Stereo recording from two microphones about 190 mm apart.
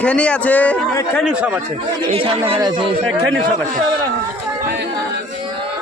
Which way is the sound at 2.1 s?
30° right (ahead or behind).